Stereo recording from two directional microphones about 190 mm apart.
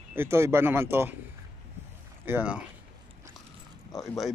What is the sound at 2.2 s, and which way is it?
Speech, 10° right (ahead or behind).